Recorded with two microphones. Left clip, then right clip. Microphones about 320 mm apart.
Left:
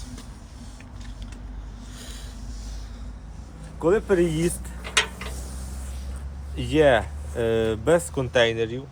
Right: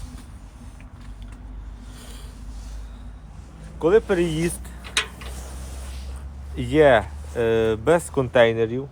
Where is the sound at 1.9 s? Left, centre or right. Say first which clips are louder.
Left 2 dB; centre.